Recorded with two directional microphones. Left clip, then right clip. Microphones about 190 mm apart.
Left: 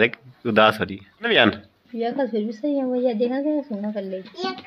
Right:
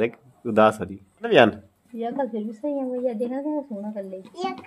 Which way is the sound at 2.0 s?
45° left (ahead or behind).